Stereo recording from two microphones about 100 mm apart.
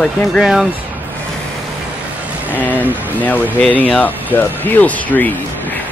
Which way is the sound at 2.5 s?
15° left (ahead or behind).